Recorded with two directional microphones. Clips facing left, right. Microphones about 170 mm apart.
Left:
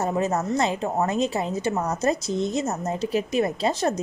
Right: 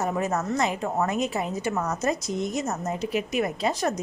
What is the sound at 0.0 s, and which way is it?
A woman's voice, 25° left (ahead or behind).